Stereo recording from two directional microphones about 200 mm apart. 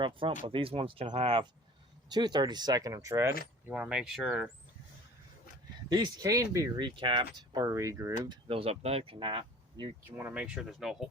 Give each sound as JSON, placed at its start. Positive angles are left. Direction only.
{"t": 0.0, "sound": "speech", "side_deg": -25}
{"t": 3.7, "sound": "speech", "side_deg": -5}
{"t": 5.9, "sound": "speech", "side_deg": -20}
{"t": 10.2, "sound": "speech", "side_deg": -10}